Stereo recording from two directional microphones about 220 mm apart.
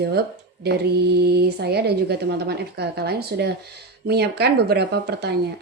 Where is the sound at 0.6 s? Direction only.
50° right (ahead or behind).